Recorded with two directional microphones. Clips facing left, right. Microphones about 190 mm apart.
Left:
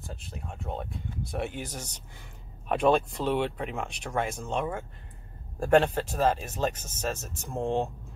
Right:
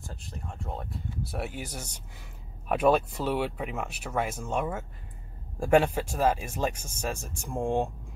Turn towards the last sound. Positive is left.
turn(degrees=-10)  # may be behind; listen again after turning